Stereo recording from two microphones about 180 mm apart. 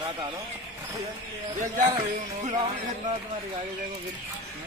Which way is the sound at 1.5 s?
45° right (ahead or behind).